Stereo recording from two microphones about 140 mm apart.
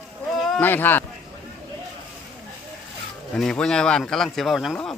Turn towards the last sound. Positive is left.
turn(degrees=0)  # may be behind; listen again after turning